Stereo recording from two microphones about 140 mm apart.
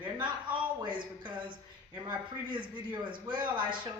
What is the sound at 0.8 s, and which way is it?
Speech, 35° right (ahead or behind).